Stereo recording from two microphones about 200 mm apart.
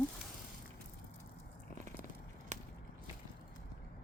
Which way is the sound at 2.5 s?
35° right (ahead or behind).